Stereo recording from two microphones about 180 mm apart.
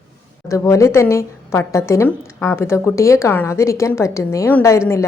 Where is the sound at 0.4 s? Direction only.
15° left (ahead or behind).